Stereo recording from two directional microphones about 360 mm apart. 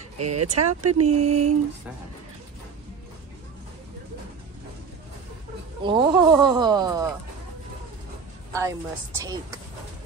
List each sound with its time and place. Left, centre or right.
0.2 s speech: right
1.2 s a sound: centre
5.9 s speech: centre
8.5 s speech: centre